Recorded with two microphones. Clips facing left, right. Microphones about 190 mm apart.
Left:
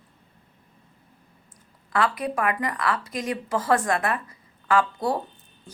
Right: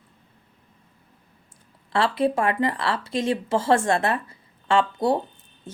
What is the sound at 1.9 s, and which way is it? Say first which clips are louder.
A woman's voice: right 3 dB; 30° right (ahead or behind).